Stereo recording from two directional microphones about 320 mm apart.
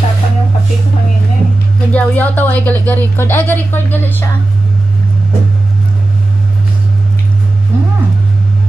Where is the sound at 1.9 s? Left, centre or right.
Centre.